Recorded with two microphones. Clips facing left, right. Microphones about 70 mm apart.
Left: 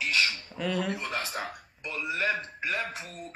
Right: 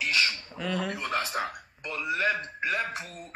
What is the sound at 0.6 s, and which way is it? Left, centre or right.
Speech, centre.